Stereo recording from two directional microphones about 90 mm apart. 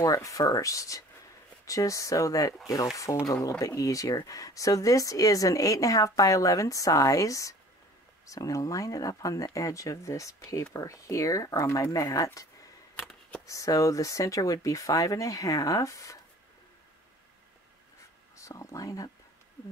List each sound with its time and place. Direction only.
0.0 s speech: 40° left (ahead or behind)
13.5 s speech: 40° left (ahead or behind)
18.3 s speech: 35° left (ahead or behind)